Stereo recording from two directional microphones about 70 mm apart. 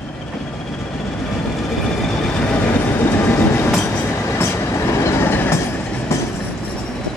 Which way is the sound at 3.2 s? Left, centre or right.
Left.